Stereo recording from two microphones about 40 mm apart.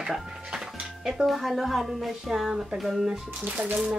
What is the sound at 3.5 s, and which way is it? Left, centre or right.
Speech, right.